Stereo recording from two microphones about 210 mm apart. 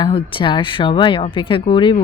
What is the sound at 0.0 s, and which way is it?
Speech, 25° left (ahead or behind).